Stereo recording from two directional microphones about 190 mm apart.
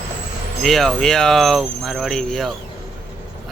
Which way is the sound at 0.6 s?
Centre (ahead or behind).